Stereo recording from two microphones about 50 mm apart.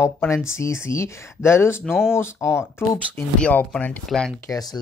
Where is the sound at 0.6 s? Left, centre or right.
Left.